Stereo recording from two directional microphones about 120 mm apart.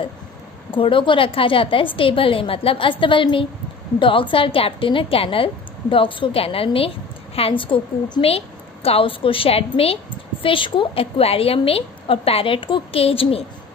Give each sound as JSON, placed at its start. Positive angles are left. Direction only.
{"t": 0.7, "sound": "a woman's voice", "side_deg": 45}